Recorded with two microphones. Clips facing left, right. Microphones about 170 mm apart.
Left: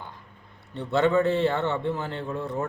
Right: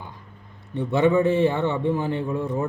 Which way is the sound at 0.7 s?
15° right (ahead or behind).